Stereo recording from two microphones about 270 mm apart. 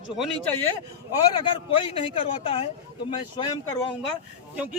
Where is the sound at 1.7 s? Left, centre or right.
Centre.